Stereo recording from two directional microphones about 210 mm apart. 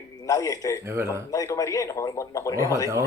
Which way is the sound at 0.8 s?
10° right (ahead or behind).